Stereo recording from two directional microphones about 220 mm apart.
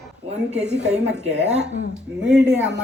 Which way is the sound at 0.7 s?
5° right (ahead or behind).